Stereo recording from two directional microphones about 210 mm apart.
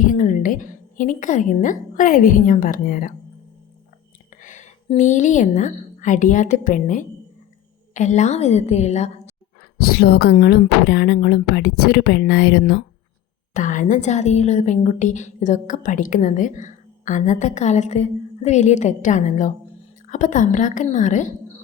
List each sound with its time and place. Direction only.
0.0 s a woman's voice: 40° left (ahead or behind)
4.4 s a sound: 35° left (ahead or behind)
4.9 s a woman's voice: 35° left (ahead or behind)
9.7 s speech: 45° left (ahead or behind)
13.5 s a woman's voice: 40° left (ahead or behind)